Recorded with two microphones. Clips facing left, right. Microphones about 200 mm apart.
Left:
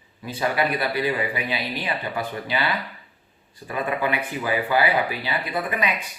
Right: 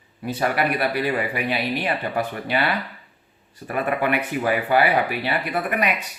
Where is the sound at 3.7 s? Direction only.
60° right (ahead or behind).